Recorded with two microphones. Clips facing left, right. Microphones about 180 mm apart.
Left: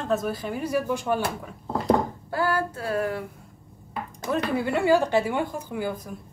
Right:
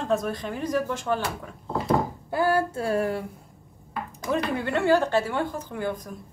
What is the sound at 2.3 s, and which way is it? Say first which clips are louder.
Female singing: right 3 dB; 20° right (ahead or behind).